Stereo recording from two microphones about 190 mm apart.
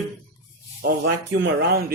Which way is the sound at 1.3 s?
55° right (ahead or behind).